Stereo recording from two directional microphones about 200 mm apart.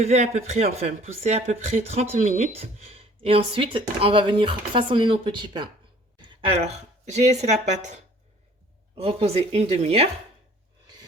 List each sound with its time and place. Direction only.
0.0 s speech: 35° right (ahead or behind)